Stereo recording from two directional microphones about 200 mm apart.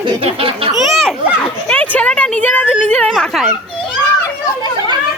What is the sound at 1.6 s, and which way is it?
A woman's voice, 5° left (ahead or behind).